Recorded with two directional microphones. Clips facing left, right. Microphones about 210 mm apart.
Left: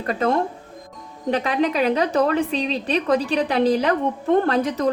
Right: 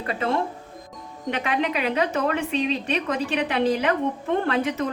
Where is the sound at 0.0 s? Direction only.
45° left (ahead or behind).